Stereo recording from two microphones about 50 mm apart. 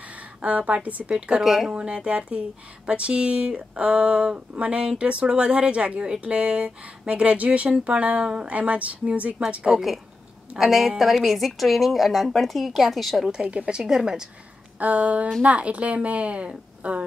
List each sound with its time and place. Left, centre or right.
0.4 s speech: right
1.4 s speech: centre
1.7 s speech: centre
10.6 s speech: centre
13.3 s a woman's voice: centre
14.8 s speech: right